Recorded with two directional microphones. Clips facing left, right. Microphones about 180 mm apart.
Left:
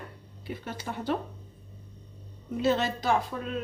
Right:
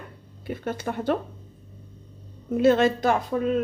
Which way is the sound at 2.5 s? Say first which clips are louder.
Right 8 dB; 55° right (ahead or behind).